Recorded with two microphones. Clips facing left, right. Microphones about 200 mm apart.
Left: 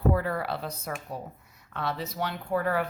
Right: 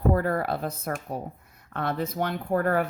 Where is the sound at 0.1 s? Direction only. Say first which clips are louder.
Right 3 dB; 45° right (ahead or behind).